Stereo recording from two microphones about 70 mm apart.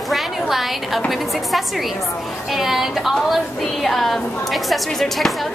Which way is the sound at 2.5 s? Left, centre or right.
Centre.